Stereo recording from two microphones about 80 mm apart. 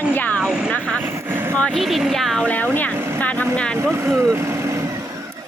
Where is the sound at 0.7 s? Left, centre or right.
Centre.